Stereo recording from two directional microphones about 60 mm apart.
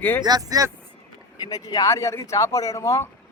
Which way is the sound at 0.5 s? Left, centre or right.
Right.